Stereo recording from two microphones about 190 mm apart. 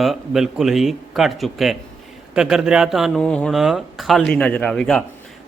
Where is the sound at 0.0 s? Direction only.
Centre (ahead or behind).